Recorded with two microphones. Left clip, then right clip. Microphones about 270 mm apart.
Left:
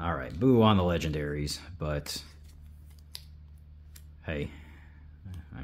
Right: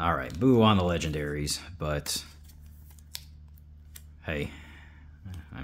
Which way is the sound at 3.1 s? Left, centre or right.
Centre.